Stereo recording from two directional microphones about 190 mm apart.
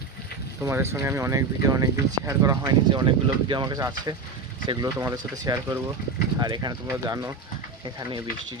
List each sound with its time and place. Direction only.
0.6 s speech: 15° right (ahead or behind)